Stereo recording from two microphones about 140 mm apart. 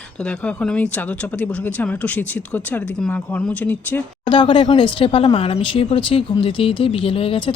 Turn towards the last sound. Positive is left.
turn(degrees=40)  # may be behind; listen again after turning